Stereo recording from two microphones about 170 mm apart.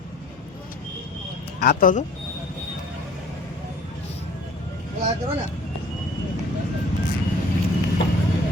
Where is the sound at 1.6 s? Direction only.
60° left (ahead or behind).